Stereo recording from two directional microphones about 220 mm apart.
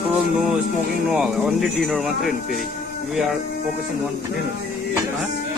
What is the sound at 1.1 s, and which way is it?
Speech, centre (ahead or behind).